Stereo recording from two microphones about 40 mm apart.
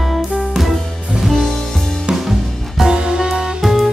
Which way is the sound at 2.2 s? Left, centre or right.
Centre.